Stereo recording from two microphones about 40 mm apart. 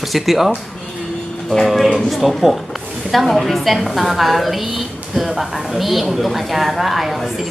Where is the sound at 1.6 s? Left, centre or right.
Centre.